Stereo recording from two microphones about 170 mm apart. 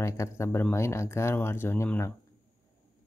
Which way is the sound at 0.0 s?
15° left (ahead or behind).